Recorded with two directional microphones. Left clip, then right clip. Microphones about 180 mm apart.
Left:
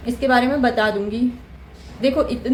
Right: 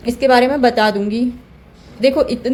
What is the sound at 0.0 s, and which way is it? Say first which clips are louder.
Speech: right 5 dB; 40° right (ahead or behind).